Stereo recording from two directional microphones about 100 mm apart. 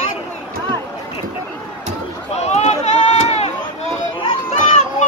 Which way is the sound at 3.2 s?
90° left.